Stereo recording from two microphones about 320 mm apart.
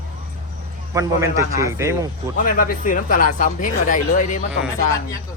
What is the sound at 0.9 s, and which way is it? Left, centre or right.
A man's voice, centre.